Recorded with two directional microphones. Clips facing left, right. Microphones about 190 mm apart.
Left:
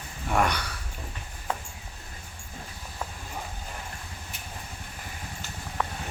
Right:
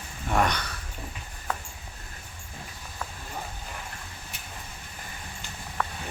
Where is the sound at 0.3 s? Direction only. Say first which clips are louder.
Even; 5° left (ahead or behind).